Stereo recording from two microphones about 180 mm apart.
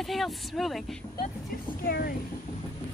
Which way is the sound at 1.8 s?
55° left (ahead or behind).